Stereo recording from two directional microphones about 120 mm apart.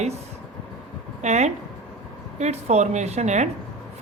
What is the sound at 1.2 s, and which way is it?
A woman's voice, 70° right (ahead or behind).